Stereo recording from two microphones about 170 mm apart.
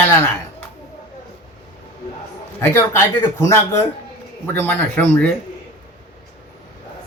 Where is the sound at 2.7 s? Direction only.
15° left (ahead or behind).